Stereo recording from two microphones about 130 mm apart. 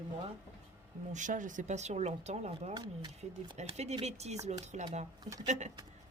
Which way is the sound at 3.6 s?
60° right (ahead or behind).